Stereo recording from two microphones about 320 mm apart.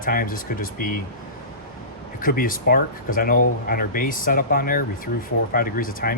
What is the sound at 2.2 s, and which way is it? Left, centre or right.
A man's voice, left.